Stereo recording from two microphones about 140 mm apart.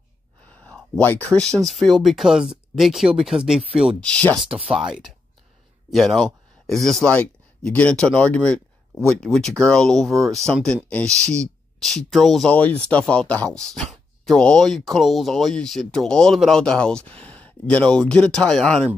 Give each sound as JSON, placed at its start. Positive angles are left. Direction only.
{"t": 0.9, "sound": "speech", "side_deg": 10}
{"t": 4.0, "sound": "speech", "side_deg": 10}
{"t": 4.5, "sound": "speech", "side_deg": -40}
{"t": 4.7, "sound": "speech", "side_deg": -5}